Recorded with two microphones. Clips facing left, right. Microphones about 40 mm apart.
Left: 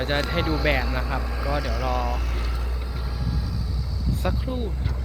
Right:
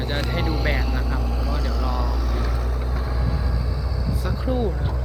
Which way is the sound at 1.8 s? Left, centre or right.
Left.